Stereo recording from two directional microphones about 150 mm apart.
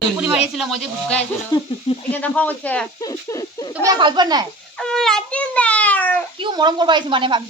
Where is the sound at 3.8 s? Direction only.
30° right (ahead or behind).